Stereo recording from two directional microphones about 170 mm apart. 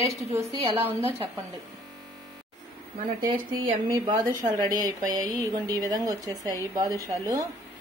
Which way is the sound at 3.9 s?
25° right (ahead or behind).